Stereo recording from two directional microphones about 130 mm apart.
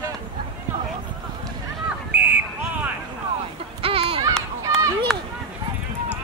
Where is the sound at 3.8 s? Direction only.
45° right (ahead or behind).